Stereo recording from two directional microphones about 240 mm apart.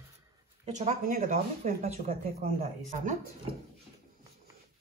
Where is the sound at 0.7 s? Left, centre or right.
Right.